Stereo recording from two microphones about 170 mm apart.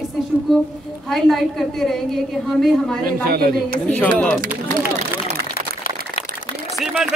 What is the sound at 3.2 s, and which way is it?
Speech, 60° right (ahead or behind).